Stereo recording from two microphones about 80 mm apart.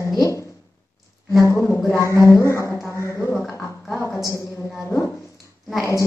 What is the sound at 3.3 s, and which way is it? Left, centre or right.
Speech, centre.